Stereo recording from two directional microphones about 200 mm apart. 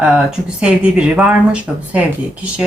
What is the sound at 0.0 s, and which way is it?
Speech, 5° right (ahead or behind).